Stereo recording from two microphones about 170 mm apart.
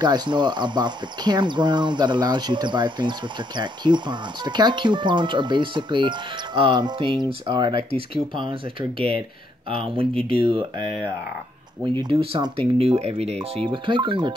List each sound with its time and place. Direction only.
0.0 s speech: 25° right (ahead or behind)